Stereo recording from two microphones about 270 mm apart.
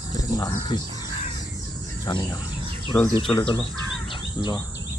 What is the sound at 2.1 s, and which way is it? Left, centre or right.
Speech, centre.